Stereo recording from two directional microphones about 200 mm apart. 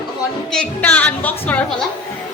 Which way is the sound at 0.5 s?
5° left (ahead or behind).